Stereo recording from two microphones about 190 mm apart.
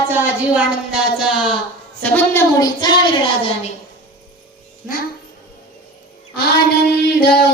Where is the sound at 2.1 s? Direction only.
15° left (ahead or behind).